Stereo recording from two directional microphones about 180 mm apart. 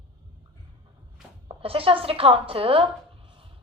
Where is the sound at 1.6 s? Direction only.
30° right (ahead or behind).